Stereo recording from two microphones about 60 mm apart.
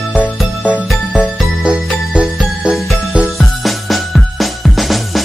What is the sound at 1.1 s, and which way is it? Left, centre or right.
Music, centre.